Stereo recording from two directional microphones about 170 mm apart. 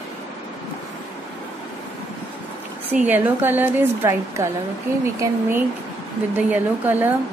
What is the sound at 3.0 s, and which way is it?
A woman's voice, 10° right (ahead or behind).